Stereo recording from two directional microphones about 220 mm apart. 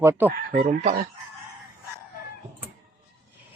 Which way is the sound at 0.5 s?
30° right (ahead or behind).